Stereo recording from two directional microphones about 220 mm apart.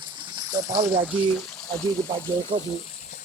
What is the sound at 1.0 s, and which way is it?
Speech, 5° left (ahead or behind).